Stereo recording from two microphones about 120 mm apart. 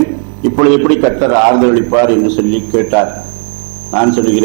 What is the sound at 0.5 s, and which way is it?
A man's voice, 20° right (ahead or behind).